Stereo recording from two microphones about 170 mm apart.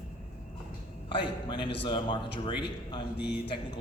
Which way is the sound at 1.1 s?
25° left (ahead or behind).